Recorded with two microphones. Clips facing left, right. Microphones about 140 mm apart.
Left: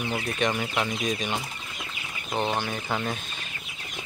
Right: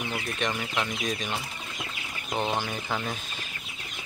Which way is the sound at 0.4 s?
5° left (ahead or behind).